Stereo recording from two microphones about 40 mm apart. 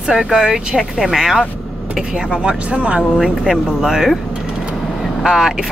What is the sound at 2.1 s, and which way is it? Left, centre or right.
Speech, right.